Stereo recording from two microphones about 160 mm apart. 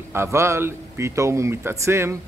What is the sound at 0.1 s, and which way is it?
Speech, 15° right (ahead or behind).